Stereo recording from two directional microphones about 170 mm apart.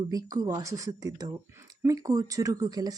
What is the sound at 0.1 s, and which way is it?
Speech, 20° right (ahead or behind).